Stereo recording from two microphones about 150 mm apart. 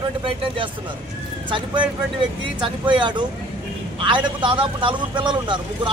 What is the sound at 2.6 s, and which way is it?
A man's voice, 35° right (ahead or behind).